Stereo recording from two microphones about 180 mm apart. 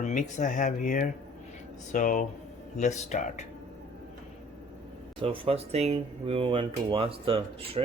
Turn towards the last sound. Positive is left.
turn(degrees=-30)  # may be behind; listen again after turning